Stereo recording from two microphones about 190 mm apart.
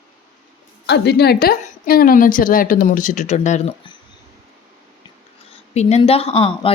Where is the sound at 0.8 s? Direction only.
60° left (ahead or behind); by 3.7 s 35° left (ahead or behind).